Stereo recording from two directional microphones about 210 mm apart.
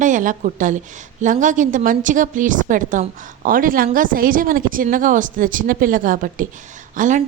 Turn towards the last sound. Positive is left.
turn(degrees=-40)  # may be behind; listen again after turning